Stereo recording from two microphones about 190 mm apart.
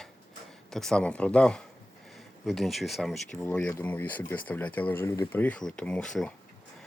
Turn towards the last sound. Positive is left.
turn(degrees=5)  # may be behind; listen again after turning